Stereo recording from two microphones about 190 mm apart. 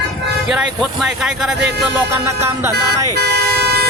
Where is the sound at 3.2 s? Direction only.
60° right (ahead or behind).